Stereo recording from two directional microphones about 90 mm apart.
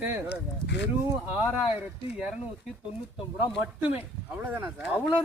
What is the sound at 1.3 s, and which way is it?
Speech, 15° right (ahead or behind).